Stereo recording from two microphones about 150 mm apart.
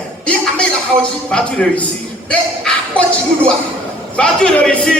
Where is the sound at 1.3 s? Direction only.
5° left (ahead or behind).